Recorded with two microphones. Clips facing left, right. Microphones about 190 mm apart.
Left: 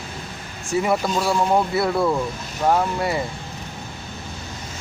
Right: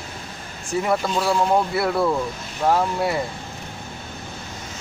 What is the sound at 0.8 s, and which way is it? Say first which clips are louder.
Speech: left 1 dB; 5° left (ahead or behind).